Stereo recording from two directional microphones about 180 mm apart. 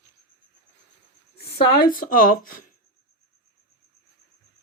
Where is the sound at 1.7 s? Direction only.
55° left (ahead or behind).